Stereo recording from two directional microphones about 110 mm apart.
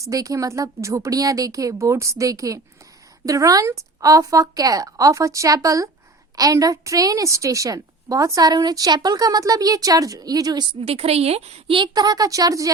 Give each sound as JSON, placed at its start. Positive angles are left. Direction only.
{"t": 0.0, "sound": "a woman's voice", "side_deg": -30}
{"t": 10.8, "sound": "a woman's voice", "side_deg": -60}
{"t": 11.8, "sound": "a woman's voice", "side_deg": -35}